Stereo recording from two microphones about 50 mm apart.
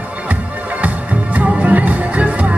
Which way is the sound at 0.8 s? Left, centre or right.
Right.